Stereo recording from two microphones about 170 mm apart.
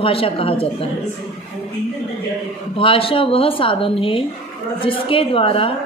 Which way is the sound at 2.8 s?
35° left (ahead or behind).